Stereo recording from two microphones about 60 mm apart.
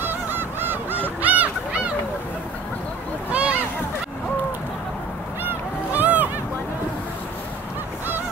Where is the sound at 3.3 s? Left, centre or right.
Right.